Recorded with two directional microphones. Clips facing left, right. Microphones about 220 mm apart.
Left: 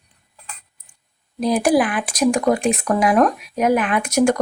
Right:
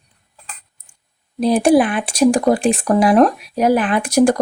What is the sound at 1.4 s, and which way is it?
Speech, 30° right (ahead or behind).